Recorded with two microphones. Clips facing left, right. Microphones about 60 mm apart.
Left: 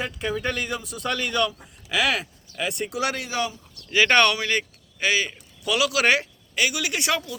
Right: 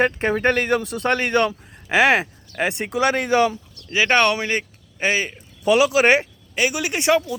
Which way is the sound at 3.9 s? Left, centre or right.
Centre.